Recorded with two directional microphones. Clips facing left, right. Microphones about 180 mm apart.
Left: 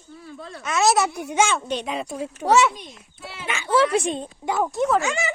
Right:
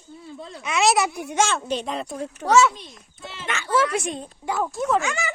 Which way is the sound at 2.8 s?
10° left (ahead or behind).